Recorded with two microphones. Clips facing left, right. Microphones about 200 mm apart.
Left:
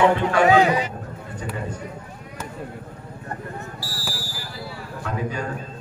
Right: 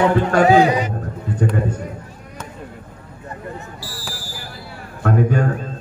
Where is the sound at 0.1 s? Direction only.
40° right (ahead or behind).